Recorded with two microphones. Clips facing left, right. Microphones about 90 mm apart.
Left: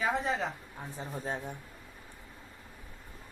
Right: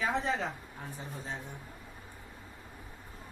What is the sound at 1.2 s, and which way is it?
Speech, 50° left (ahead or behind).